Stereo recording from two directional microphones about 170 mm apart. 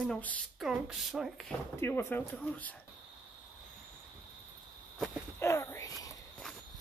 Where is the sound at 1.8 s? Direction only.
15° left (ahead or behind).